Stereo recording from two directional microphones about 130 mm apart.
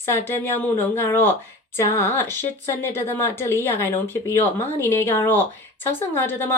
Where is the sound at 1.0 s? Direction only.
15° left (ahead or behind).